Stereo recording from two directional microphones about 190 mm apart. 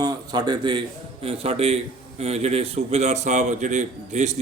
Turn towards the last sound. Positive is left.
turn(degrees=-40)  # may be behind; listen again after turning